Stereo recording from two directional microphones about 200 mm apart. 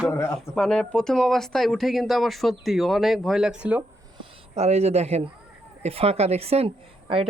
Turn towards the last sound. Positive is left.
turn(degrees=-25)  # may be behind; listen again after turning